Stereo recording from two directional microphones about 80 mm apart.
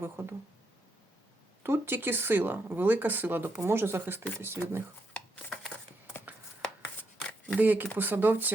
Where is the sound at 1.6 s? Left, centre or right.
Right.